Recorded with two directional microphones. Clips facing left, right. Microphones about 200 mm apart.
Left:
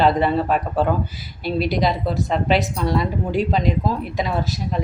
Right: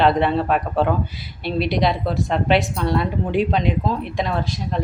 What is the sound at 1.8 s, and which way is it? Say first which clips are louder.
Speech: even; centre (ahead or behind).